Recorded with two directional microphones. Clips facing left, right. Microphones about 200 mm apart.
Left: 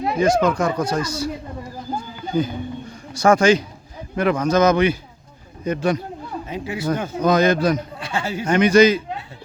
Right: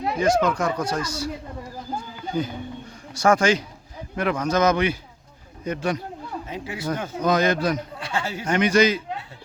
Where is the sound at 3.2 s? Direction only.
30° left (ahead or behind).